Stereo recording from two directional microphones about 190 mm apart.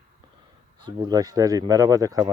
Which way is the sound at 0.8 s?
20° right (ahead or behind).